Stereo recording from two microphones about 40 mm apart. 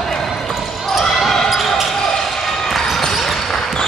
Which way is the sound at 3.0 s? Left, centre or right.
Centre.